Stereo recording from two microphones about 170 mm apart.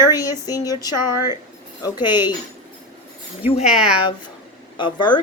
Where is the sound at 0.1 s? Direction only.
20° left (ahead or behind).